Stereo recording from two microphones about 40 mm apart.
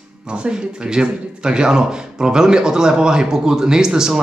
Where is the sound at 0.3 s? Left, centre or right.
Right.